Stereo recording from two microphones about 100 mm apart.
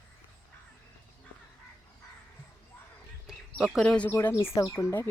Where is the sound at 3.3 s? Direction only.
5° right (ahead or behind).